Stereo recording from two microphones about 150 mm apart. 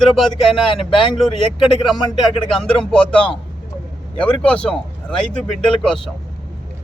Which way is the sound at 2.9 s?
5° left (ahead or behind).